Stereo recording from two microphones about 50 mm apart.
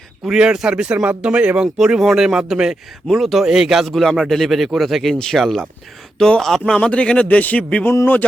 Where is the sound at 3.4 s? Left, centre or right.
Centre.